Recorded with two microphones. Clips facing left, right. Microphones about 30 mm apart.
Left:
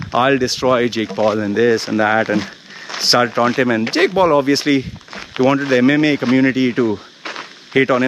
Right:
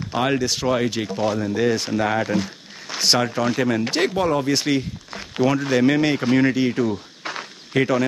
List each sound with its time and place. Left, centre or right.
0.1 s speech: left
7.7 s speech: left